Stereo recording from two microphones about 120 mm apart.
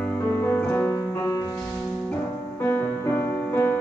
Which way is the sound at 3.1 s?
20° left (ahead or behind).